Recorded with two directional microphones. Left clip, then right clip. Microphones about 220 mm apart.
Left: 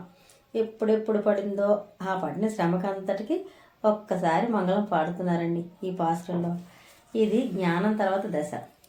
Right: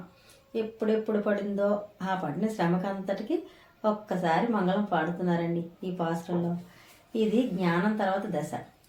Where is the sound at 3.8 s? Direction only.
30° left (ahead or behind).